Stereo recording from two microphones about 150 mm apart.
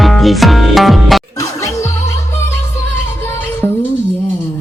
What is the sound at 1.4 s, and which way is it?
Music, 20° left (ahead or behind).